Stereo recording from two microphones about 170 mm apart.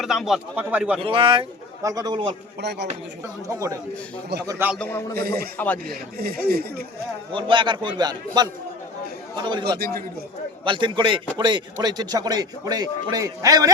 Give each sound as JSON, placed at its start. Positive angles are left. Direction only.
{"t": 0.0, "sound": "speech", "side_deg": 0}
{"t": 1.0, "sound": "a man's voice", "side_deg": -30}
{"t": 2.6, "sound": "a man's voice", "side_deg": -80}
{"t": 3.5, "sound": "a man's voice", "side_deg": -20}
{"t": 4.8, "sound": "a man's voice", "side_deg": 10}
{"t": 5.1, "sound": "speech", "side_deg": -65}
{"t": 5.5, "sound": "a man's voice", "side_deg": 10}
{"t": 5.9, "sound": "speech", "side_deg": -65}
{"t": 7.3, "sound": "a man's voice", "side_deg": -30}
{"t": 9.7, "sound": "speech", "side_deg": -65}
{"t": 10.6, "sound": "a man's voice", "side_deg": -30}